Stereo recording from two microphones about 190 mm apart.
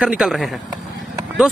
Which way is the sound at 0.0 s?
5° right (ahead or behind).